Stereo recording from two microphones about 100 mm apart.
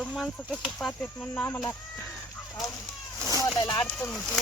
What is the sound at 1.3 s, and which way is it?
Speech, 20° left (ahead or behind).